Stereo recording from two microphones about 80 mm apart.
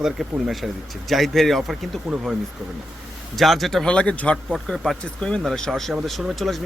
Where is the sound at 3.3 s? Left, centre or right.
Centre.